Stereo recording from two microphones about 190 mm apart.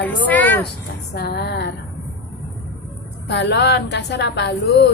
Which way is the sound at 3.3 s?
65° left (ahead or behind).